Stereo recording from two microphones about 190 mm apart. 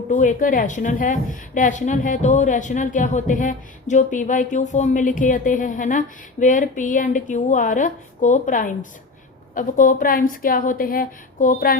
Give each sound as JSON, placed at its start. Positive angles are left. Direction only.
{"t": 0.1, "sound": "a woman's voice", "side_deg": 45}